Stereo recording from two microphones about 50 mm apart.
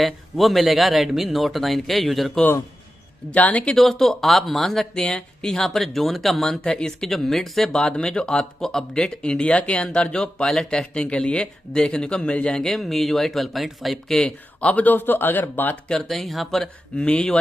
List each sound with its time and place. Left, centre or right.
0.0 s speech: centre
3.3 s speech: left
3.6 s speech: centre
6.6 s speech: centre
7.1 s speech: centre
7.7 s speech: centre
12.5 s speech: centre
14.6 s a man's voice: left
15.9 s speech: centre
16.2 s speech: centre
17.0 s speech: centre